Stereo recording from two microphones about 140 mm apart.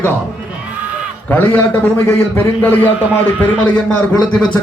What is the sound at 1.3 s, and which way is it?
Speech, 15° left (ahead or behind).